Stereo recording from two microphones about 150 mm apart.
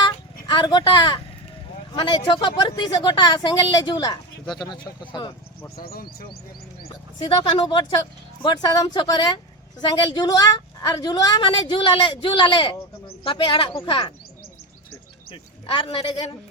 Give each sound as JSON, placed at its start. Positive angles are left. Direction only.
{"t": 0.0, "sound": "a sound", "side_deg": 30}
{"t": 2.0, "sound": "a woman's voice", "side_deg": 30}
{"t": 5.7, "sound": "speech", "side_deg": 80}
{"t": 6.9, "sound": "a woman's voice", "side_deg": 30}
{"t": 15.3, "sound": "speech", "side_deg": 35}